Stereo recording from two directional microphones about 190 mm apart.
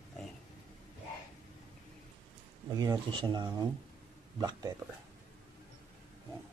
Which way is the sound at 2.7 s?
20° right (ahead or behind).